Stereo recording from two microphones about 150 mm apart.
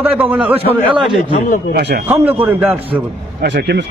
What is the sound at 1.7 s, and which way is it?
Speech, 90° right.